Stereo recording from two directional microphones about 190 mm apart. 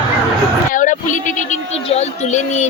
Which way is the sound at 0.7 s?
40° left (ahead or behind).